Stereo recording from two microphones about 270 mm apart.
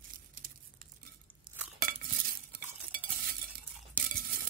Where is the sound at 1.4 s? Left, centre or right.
Centre.